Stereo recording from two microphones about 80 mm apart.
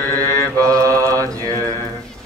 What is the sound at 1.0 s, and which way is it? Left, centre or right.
Mantra, right.